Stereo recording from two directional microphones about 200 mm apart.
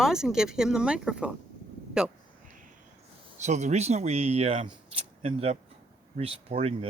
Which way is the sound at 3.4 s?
35° right (ahead or behind).